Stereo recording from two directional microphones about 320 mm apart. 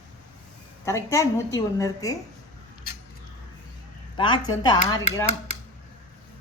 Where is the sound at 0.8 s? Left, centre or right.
Centre.